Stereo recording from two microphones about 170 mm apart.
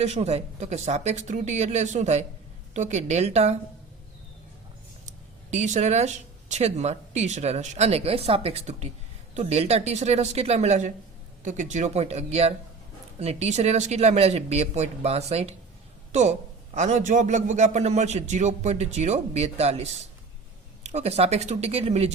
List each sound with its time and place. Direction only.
0.0 s speech: 40° right (ahead or behind)
5.0 s speech: 45° right (ahead or behind)
16.7 s a man's voice: 45° right (ahead or behind)